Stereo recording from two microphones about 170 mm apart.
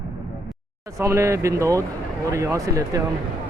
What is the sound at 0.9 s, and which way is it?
Speech, 15° right (ahead or behind).